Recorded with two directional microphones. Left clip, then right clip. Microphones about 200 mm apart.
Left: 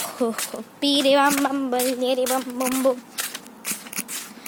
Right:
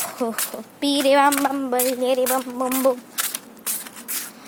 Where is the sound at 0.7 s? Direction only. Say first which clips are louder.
Right 1 dB; centre (ahead or behind).